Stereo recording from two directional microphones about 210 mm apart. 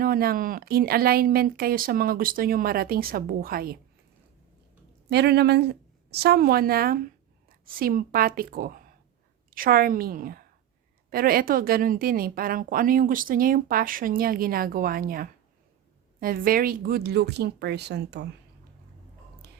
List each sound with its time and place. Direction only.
0.0 s a woman's voice: 45° right (ahead or behind)
5.0 s a woman's voice: 50° right (ahead or behind)
19.4 s a sound: 50° right (ahead or behind)